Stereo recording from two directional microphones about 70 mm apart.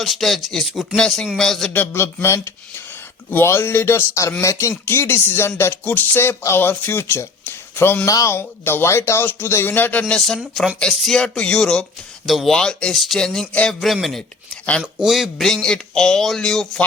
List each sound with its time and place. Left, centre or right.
0.0 s speech: centre
0.9 s speech: centre
1.7 s speech: left
2.2 s speech: left
5.8 s a sound: left
6.6 s speech: left
8.0 s speech: left
8.4 s speech: left
10.2 s speech: centre
12.2 s speech: centre
13.7 s speech: centre